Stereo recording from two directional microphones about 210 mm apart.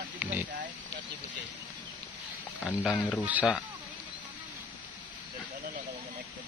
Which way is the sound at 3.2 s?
5° right (ahead or behind).